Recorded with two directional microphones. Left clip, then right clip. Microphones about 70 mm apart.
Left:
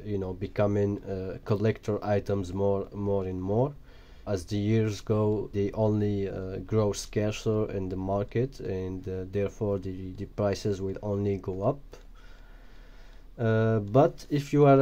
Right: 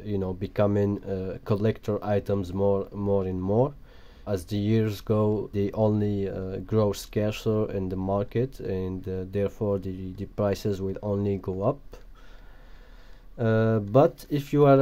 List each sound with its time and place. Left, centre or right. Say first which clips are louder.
0.0 s speech: right 2 dB; right
0.7 s speech: right 2 dB; right
2.3 s speech: right 3 dB; right
3.0 s speech: right 3 dB; right
4.2 s speech: right 2 dB; right
13.4 s speech: right 2 dB; right